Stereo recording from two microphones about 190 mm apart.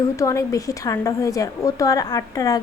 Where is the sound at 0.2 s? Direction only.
15° left (ahead or behind).